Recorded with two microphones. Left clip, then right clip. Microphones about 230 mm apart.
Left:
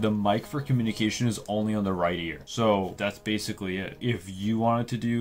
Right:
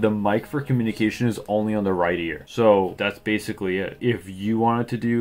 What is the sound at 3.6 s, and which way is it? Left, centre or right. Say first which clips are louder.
Speech: right 8 dB; left.